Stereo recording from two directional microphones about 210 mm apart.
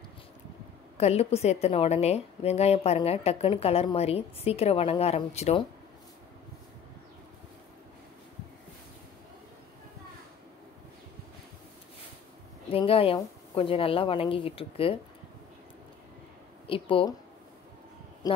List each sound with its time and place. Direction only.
0.9 s a woman's voice: 30° left (ahead or behind)
12.7 s a woman's voice: 25° left (ahead or behind)
16.6 s a woman's voice: 25° left (ahead or behind)